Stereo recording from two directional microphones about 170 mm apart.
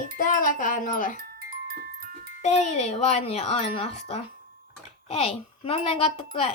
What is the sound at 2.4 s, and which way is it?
Speech, 40° left (ahead or behind).